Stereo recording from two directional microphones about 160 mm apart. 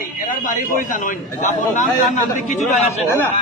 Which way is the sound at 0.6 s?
55° left (ahead or behind).